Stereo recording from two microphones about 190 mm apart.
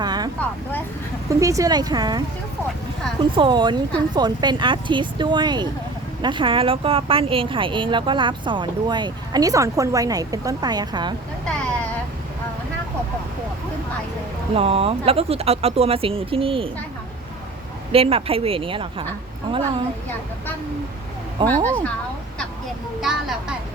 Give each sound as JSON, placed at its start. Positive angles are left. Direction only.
{"t": 0.0, "sound": "vehicle", "side_deg": -20}
{"t": 1.3, "sound": "speech", "side_deg": -15}
{"t": 3.3, "sound": "speech", "side_deg": -25}
{"t": 14.5, "sound": "speech", "side_deg": -30}
{"t": 17.9, "sound": "speech", "side_deg": -30}
{"t": 21.4, "sound": "speech", "side_deg": -25}
{"t": 23.0, "sound": "speech", "side_deg": 0}